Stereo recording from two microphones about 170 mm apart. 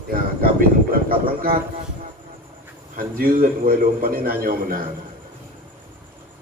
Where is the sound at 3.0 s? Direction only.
60° right (ahead or behind).